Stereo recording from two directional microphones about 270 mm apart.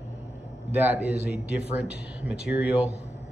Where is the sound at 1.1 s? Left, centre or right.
Left.